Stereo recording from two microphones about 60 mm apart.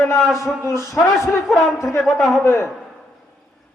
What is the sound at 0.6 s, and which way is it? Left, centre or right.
Speech, left.